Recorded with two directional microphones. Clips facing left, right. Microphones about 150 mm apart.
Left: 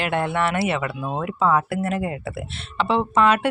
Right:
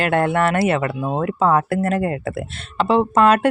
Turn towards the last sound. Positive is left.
turn(degrees=-45)  # may be behind; listen again after turning